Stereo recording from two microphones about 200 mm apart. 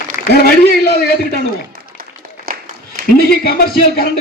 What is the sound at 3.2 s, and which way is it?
Speech, 50° left (ahead or behind).